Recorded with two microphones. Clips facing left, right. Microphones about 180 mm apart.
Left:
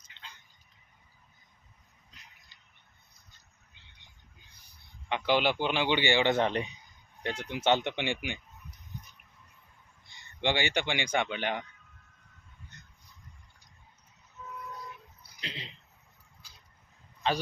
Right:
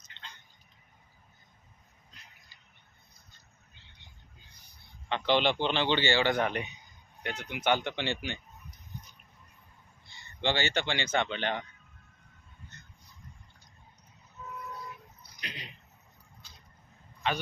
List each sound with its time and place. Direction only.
0.0 s tick: 10° left (ahead or behind)
5.0 s a man's voice: 10° left (ahead or behind)
10.1 s speech: 15° left (ahead or behind)
15.4 s a sound: 25° left (ahead or behind)